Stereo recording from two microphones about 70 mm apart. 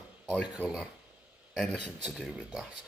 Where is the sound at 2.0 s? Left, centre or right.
Centre.